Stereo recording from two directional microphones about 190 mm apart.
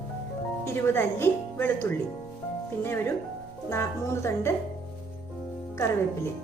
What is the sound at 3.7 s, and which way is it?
Speech, 15° left (ahead or behind).